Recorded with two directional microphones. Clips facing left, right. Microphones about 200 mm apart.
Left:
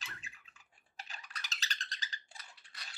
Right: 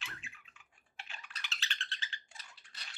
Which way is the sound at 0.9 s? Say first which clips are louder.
Left 1 dB; 40° left (ahead or behind).